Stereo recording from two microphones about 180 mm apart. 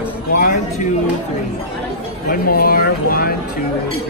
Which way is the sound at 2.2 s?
55° left (ahead or behind).